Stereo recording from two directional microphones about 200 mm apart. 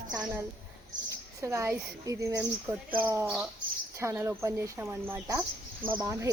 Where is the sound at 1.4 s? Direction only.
15° right (ahead or behind).